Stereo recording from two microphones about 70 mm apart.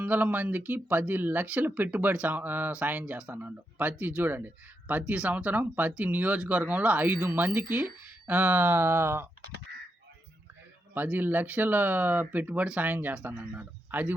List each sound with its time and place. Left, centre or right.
0.0 s speech: right
10.9 s speech: right